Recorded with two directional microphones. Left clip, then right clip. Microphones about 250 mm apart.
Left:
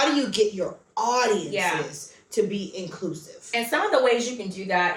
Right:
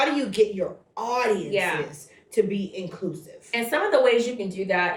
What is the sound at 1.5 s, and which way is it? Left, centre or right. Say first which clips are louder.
Speech: right 1 dB; centre.